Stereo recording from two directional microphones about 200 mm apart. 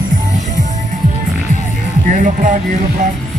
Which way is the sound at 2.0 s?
40° right (ahead or behind).